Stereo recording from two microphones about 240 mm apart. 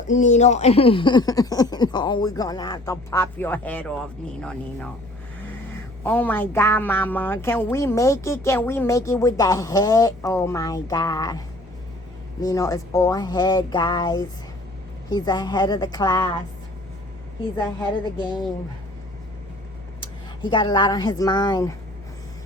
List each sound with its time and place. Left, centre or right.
0.1 s a man's voice: left; by 4.9 s centre
6.0 s a man's voice: centre
20.0 s speech: centre